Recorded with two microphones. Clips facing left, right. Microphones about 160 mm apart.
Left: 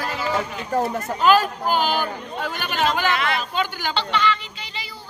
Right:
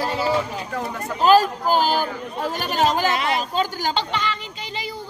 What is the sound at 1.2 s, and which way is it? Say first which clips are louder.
Speech: right 2 dB; 35° right (ahead or behind).